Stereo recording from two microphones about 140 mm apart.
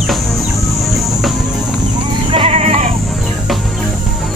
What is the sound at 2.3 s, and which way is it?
Sheep, 40° right (ahead or behind).